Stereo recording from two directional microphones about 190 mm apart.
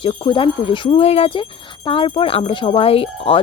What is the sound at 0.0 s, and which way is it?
Speech, 25° left (ahead or behind).